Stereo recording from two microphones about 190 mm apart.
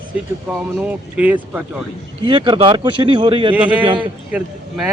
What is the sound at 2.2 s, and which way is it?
Speech, 25° right (ahead or behind).